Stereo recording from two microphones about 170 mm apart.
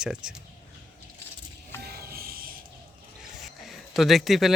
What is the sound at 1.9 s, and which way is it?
Music, 60° right (ahead or behind).